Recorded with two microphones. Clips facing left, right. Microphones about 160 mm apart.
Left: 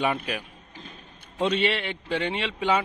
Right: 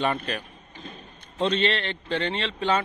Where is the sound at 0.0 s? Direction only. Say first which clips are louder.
Even; 10° left (ahead or behind).